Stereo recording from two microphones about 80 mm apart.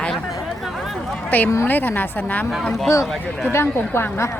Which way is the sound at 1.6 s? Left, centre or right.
Left.